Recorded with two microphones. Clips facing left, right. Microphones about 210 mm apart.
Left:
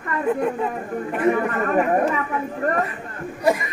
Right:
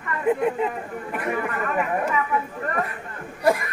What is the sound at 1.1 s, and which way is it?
Chatter, 40° left (ahead or behind).